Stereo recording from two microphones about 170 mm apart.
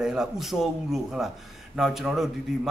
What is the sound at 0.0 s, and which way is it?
A man's voice, 5° right (ahead or behind).